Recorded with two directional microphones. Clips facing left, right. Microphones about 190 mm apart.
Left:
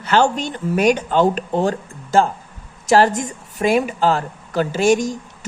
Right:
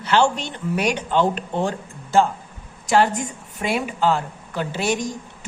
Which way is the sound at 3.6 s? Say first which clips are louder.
Left 5 dB; 40° left (ahead or behind).